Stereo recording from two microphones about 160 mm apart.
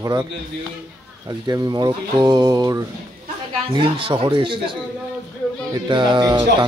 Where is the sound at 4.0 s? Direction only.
35° right (ahead or behind).